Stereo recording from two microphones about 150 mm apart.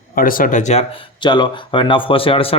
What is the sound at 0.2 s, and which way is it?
Speech, 70° left (ahead or behind).